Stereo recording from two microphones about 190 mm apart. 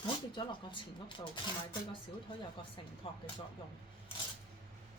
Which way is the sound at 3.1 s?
30° left (ahead or behind).